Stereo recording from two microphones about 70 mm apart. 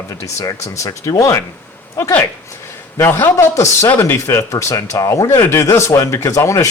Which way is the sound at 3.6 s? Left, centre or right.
Left.